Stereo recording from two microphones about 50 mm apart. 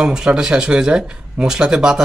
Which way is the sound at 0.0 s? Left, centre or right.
Centre.